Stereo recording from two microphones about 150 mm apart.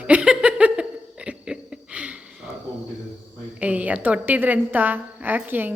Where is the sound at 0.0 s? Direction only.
10° right (ahead or behind).